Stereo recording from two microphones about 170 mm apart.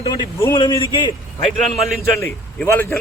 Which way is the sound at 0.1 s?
20° left (ahead or behind).